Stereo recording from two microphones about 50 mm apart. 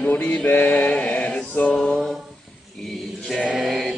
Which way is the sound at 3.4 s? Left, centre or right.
Right.